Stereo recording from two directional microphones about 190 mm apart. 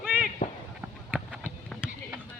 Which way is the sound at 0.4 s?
40° left (ahead or behind).